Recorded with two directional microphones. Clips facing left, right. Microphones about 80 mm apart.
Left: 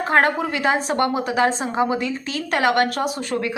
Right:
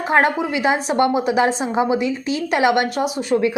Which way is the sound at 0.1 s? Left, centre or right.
Centre.